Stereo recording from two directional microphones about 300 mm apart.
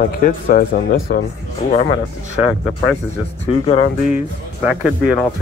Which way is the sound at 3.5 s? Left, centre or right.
Centre.